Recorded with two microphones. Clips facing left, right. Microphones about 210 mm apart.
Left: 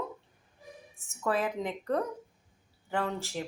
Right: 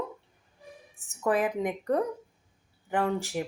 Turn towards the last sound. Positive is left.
turn(degrees=-15)  # may be behind; listen again after turning